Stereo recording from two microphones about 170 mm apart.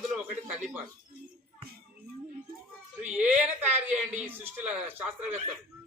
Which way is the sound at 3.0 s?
10° right (ahead or behind).